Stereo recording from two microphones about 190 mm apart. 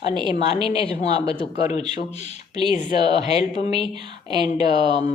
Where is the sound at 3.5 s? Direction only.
25° right (ahead or behind).